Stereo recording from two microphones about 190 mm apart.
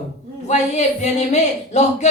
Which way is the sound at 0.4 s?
35° left (ahead or behind).